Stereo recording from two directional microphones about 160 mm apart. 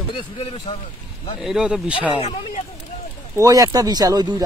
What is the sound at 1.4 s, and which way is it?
Speech, 5° right (ahead or behind).